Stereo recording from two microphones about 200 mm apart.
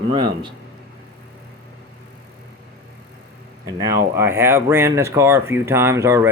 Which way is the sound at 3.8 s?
15° right (ahead or behind).